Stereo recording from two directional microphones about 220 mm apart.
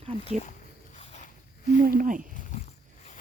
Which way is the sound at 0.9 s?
30° left (ahead or behind).